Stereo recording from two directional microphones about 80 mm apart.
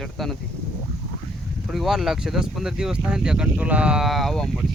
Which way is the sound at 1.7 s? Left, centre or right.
Centre.